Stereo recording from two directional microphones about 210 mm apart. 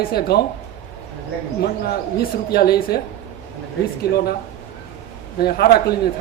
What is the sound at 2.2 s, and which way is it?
Speech, 45° left (ahead or behind).